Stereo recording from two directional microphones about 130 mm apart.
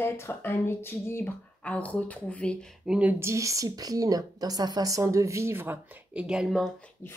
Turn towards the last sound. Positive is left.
turn(degrees=-5)  # may be behind; listen again after turning